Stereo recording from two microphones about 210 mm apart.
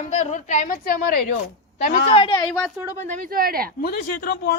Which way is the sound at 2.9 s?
35° right (ahead or behind).